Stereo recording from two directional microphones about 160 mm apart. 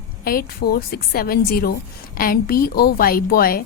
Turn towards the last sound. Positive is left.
turn(degrees=70)  # may be behind; listen again after turning